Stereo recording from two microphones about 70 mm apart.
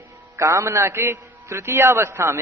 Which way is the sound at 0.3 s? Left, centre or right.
Right.